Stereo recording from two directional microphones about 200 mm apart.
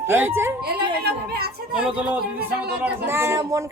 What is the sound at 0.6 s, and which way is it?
A woman's voice, 50° right (ahead or behind).